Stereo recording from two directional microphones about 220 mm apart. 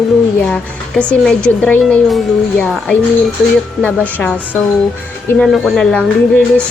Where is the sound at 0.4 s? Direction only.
5° left (ahead or behind).